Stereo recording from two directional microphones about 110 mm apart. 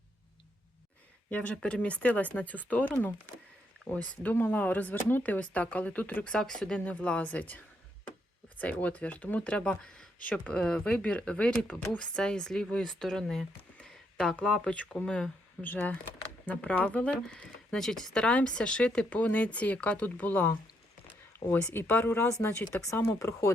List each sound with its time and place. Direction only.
1.3 s speech: 10° left (ahead or behind); by 23.5 s 25° left (ahead or behind)